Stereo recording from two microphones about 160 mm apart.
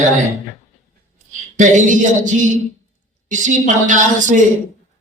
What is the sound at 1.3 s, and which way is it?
Speech, 50° right (ahead or behind).